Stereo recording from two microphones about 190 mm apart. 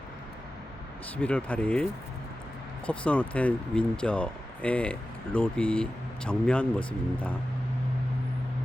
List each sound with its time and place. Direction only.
1.1 s speech: 5° left (ahead or behind)